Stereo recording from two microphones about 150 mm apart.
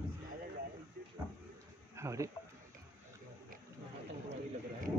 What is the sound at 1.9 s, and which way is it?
Speech, 20° right (ahead or behind).